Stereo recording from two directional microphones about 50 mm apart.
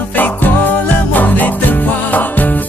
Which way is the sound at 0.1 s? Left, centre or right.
Left.